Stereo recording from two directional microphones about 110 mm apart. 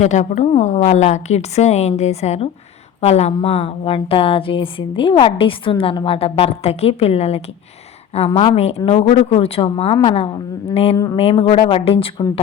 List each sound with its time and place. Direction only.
0.0 s a woman's voice: 90° left; by 10.2 s 55° left (ahead or behind)
10.9 s speech: 30° left (ahead or behind)
11.2 s a woman's voice: 65° left (ahead or behind)